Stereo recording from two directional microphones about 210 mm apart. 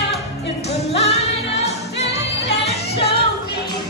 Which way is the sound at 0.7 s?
30° left (ahead or behind).